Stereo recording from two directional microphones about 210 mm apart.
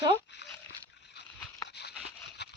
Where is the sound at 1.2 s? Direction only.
50° left (ahead or behind).